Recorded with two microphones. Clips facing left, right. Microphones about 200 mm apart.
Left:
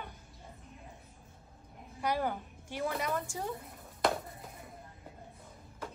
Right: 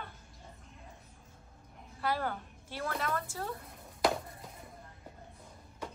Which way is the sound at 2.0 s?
15° left (ahead or behind).